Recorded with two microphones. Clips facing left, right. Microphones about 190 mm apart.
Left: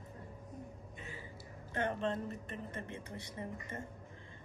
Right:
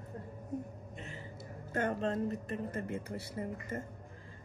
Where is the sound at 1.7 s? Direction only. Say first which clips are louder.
Right 3 dB; 45° right (ahead or behind).